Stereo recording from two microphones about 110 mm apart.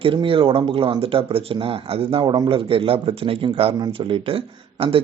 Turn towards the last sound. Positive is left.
turn(degrees=-60)  # may be behind; listen again after turning